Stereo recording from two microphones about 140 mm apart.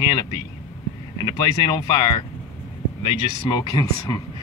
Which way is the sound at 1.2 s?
30° left (ahead or behind).